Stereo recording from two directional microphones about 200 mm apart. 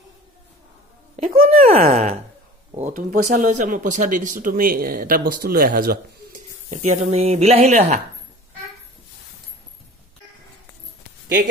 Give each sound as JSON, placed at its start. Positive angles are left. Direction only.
{"t": 1.1, "sound": "speech", "side_deg": -45}
{"t": 6.7, "sound": "speech", "side_deg": -35}